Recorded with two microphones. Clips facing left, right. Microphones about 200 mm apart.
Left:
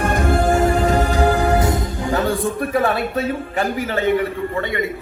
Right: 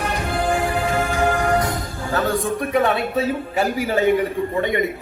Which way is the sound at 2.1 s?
10° left (ahead or behind).